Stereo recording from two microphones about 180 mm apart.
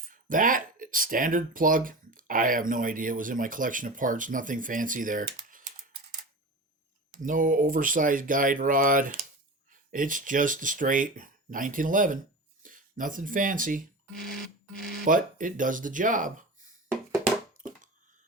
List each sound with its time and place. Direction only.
0.1 s speech: 50° right (ahead or behind)
7.1 s speech: 50° right (ahead or behind)
14.1 s music: centre (ahead or behind)
15.0 s speech: 50° right (ahead or behind)